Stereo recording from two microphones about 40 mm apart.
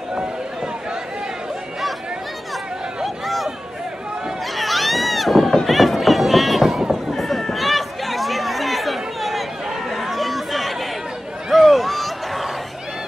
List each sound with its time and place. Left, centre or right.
0.1 s run: centre
4.6 s run: centre
9.8 s chatter: centre
11.5 s a sound: centre